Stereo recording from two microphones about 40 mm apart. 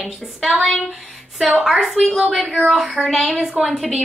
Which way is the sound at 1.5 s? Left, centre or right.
Centre.